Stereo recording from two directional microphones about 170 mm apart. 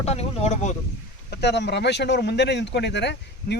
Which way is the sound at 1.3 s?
90° left.